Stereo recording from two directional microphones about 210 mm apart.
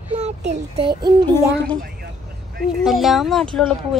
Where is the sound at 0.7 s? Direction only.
20° right (ahead or behind).